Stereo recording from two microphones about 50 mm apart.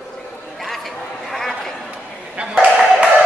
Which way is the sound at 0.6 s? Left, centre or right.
Centre.